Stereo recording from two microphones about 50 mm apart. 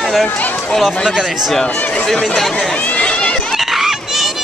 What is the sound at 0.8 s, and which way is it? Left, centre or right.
Speech, centre.